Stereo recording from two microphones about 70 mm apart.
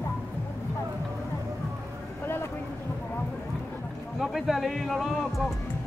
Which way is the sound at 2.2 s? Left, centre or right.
Left.